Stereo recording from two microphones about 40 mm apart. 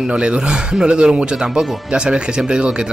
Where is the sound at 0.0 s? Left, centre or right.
Right.